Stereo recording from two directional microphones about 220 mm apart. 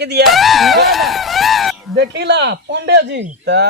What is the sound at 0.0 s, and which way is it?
Speech, 50° right (ahead or behind).